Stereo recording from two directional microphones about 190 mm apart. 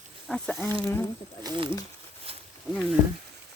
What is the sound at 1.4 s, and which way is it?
Speech, 25° right (ahead or behind).